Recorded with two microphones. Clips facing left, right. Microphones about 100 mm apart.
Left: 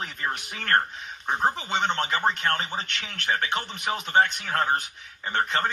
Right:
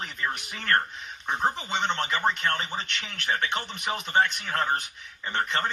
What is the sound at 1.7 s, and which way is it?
Speech, 45° left (ahead or behind).